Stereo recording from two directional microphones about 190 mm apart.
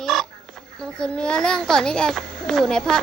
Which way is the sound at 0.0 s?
Centre (ahead or behind).